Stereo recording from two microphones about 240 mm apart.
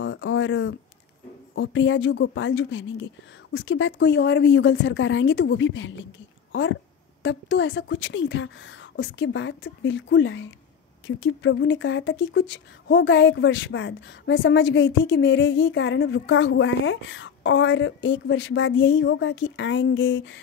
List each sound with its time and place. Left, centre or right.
0.0 s a sound: left
1.5 s speech: left
7.2 s speech: left